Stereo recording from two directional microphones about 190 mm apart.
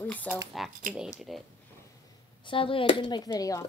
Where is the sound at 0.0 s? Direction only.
10° left (ahead or behind).